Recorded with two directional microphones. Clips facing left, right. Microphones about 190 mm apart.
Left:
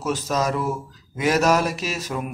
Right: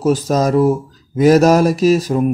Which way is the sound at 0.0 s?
35° right (ahead or behind).